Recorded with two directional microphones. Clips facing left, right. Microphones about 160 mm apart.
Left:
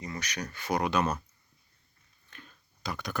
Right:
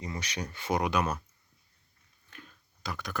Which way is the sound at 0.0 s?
25° right (ahead or behind).